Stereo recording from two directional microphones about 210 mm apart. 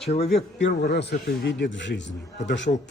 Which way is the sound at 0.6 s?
50° left (ahead or behind).